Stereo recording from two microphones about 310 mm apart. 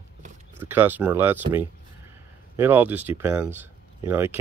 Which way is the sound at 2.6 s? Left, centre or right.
Centre.